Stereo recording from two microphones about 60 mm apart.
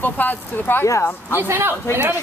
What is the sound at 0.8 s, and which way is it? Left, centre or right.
Speech, left.